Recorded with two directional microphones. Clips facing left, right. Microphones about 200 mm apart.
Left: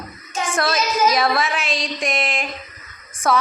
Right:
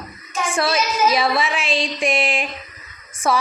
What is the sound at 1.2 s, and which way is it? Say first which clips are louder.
Speech: even; centre (ahead or behind).